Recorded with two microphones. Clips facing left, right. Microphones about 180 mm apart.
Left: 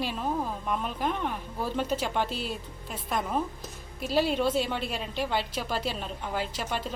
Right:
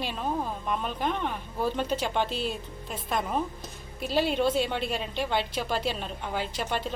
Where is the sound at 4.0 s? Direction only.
5° left (ahead or behind).